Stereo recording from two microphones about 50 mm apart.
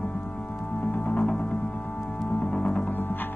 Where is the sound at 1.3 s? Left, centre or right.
Left.